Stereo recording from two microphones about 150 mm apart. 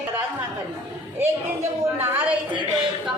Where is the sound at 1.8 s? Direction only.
15° right (ahead or behind).